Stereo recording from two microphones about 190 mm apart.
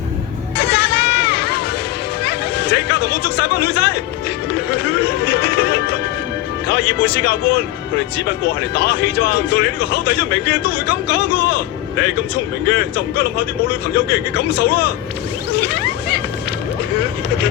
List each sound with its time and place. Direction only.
0.5 s a sound: 60° left (ahead or behind)
2.2 s speech: 60° left (ahead or behind)
4.5 s music: 60° left (ahead or behind)
6.7 s speech: 60° left (ahead or behind)
13.9 s speech: 55° left (ahead or behind)
15.5 s a sound: 60° left (ahead or behind)